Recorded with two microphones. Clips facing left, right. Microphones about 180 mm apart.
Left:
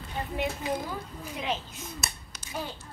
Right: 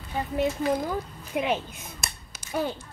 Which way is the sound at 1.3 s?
60° right (ahead or behind).